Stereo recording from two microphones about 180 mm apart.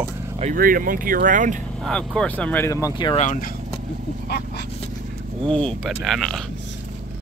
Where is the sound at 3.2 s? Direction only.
40° left (ahead or behind).